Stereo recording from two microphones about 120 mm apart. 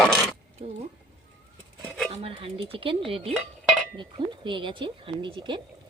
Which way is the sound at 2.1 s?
50° right (ahead or behind).